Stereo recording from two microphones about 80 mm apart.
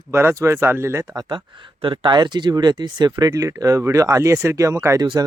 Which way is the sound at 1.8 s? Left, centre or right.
Right.